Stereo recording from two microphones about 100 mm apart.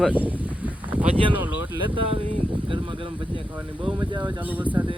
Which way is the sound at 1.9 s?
65° right (ahead or behind).